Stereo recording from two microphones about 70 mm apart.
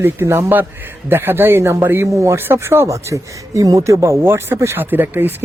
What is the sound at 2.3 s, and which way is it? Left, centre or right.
Speech, right.